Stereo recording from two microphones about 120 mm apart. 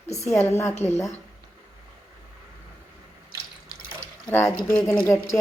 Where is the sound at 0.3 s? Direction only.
20° left (ahead or behind).